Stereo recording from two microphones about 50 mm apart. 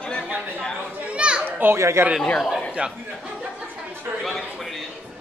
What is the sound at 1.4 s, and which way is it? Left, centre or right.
Children playing, right.